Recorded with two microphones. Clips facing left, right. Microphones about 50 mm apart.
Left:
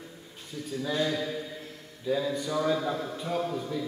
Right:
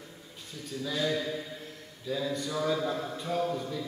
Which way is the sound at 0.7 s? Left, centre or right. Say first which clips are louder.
Left 4 dB; centre.